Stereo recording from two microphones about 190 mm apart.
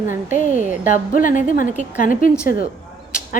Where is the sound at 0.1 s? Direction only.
40° left (ahead or behind).